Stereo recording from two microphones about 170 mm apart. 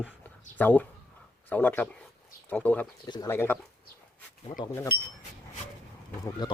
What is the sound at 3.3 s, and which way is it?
Speech, 15° left (ahead or behind).